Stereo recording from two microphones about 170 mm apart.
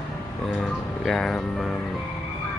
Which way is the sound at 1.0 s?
5° left (ahead or behind).